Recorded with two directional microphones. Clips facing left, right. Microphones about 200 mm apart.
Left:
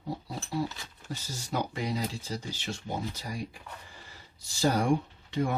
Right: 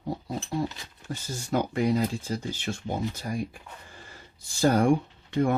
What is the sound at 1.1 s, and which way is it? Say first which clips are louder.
Speech: right 6 dB; 50° right (ahead or behind).